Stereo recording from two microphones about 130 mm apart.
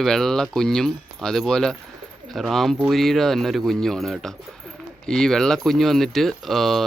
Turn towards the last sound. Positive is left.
turn(degrees=0)  # may be behind; listen again after turning